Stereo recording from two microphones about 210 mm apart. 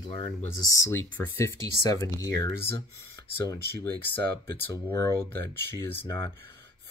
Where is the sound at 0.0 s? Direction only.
25° left (ahead or behind).